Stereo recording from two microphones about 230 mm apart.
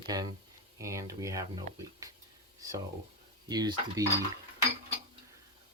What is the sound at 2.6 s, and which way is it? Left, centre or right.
Speech, centre.